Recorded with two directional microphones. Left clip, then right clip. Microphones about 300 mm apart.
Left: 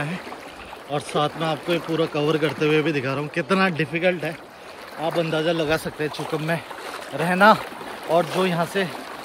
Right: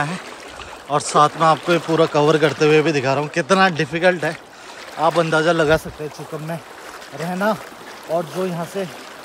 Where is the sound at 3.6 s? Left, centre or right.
Right.